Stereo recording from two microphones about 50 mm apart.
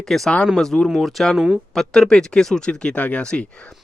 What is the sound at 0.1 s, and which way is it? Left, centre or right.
Speech, centre.